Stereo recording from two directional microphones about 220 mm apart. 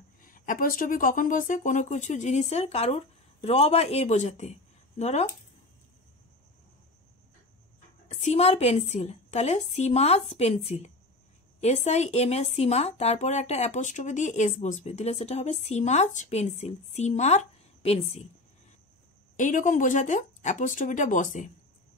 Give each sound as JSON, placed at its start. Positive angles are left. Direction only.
{"t": 0.2, "sound": "speech", "side_deg": 40}
{"t": 8.1, "sound": "a woman's voice", "side_deg": 30}
{"t": 19.3, "sound": "speech", "side_deg": 35}